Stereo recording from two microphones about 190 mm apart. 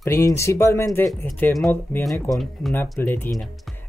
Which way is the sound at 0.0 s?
15° left (ahead or behind).